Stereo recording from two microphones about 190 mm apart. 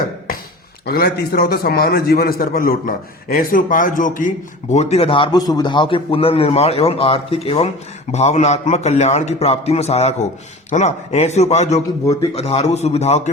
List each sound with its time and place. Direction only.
0.9 s a man's voice: 60° left (ahead or behind); by 13.3 s 35° left (ahead or behind)